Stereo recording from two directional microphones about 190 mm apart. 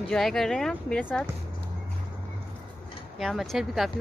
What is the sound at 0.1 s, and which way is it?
Speech, centre (ahead or behind).